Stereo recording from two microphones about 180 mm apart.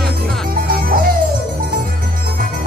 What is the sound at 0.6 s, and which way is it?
Music, 55° right (ahead or behind).